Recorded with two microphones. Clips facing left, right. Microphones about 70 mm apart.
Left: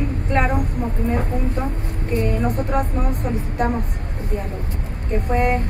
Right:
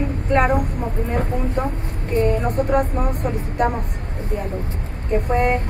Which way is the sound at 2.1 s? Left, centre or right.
Right.